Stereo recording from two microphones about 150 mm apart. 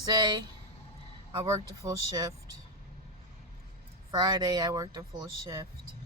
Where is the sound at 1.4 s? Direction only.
20° right (ahead or behind).